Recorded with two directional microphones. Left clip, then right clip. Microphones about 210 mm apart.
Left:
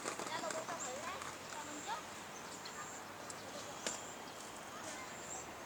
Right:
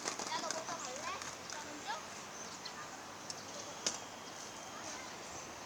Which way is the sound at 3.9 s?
50° right (ahead or behind).